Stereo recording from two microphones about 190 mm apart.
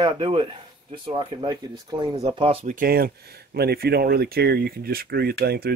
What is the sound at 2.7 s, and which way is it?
Speech, 50° right (ahead or behind).